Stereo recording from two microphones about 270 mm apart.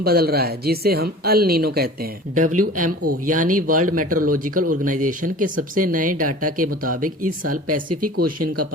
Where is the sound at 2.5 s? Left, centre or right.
Right.